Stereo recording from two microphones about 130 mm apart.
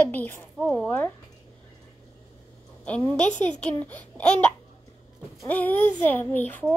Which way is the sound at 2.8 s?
10° left (ahead or behind).